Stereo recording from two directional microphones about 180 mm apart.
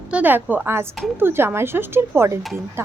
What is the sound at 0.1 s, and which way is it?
A woman's voice, 10° right (ahead or behind).